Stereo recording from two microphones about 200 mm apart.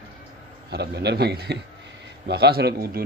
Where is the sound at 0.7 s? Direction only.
55° right (ahead or behind).